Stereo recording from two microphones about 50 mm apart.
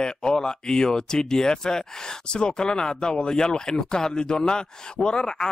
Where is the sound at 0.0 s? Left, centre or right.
Centre.